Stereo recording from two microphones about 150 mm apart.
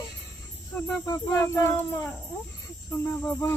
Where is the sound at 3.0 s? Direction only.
10° left (ahead or behind).